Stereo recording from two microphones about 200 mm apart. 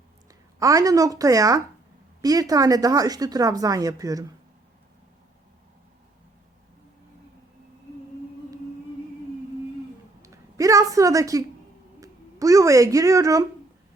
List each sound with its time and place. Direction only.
0.6 s speech: 15° right (ahead or behind)
10.2 s a woman's voice: 15° right (ahead or behind)